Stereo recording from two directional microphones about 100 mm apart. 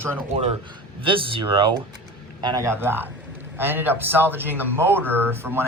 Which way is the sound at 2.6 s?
25° right (ahead or behind).